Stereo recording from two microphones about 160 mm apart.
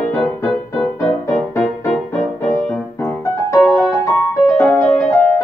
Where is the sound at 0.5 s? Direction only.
Centre (ahead or behind).